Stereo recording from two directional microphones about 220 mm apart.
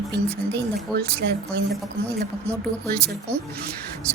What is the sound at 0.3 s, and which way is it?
Speech, 50° right (ahead or behind).